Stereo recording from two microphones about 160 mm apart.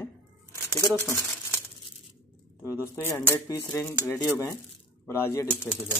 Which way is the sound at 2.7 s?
15° left (ahead or behind).